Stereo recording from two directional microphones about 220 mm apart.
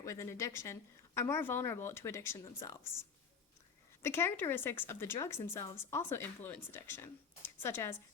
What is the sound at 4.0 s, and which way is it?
A woman's voice, 10° left (ahead or behind).